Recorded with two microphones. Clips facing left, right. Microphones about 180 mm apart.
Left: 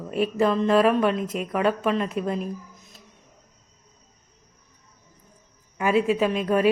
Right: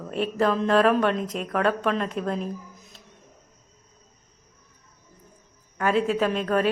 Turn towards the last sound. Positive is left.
turn(degrees=10)  # may be behind; listen again after turning